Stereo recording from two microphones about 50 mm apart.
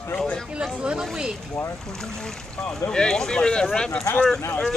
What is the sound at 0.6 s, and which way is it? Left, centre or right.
Speech, centre.